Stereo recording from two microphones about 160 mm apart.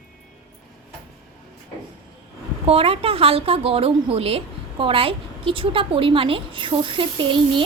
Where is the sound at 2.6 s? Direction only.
35° right (ahead or behind).